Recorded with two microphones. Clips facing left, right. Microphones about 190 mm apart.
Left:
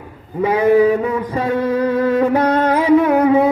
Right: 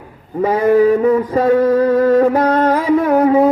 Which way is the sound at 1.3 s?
40° right (ahead or behind).